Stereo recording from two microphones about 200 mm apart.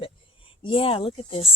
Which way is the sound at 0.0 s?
25° left (ahead or behind).